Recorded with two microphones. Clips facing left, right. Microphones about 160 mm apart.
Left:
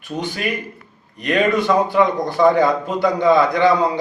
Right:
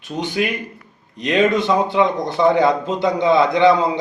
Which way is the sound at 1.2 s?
20° right (ahead or behind).